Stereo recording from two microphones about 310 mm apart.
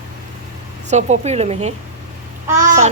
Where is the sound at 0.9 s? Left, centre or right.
Right.